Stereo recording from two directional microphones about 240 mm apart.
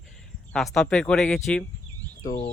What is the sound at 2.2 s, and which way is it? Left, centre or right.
Speech, left.